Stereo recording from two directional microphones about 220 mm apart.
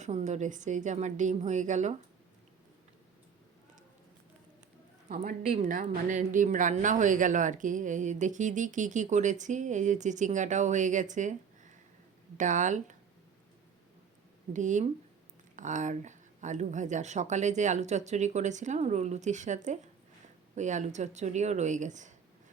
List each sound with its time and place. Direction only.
0.0 s speech: 30° right (ahead or behind)
5.0 s speech: 35° right (ahead or behind)
14.5 s speech: 35° right (ahead or behind)